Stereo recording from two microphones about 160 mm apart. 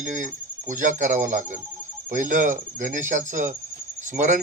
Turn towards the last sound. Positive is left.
turn(degrees=-55)  # may be behind; listen again after turning